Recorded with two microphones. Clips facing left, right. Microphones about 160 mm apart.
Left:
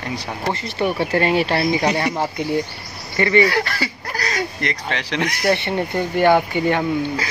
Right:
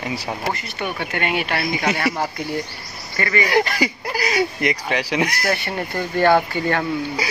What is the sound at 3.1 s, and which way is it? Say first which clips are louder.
Goose: left 6 dB; 25° left (ahead or behind).